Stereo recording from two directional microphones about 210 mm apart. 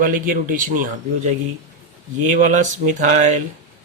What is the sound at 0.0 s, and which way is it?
Speech, 40° right (ahead or behind).